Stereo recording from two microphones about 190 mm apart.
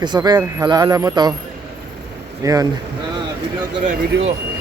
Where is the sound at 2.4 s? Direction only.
20° right (ahead or behind).